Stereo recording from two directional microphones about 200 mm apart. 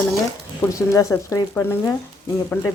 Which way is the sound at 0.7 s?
15° left (ahead or behind).